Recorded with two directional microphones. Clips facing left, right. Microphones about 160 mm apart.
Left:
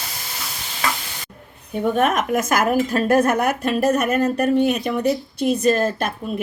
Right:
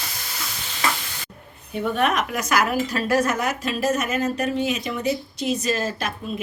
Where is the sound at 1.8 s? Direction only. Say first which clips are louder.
Left 3 dB; 45° left (ahead or behind).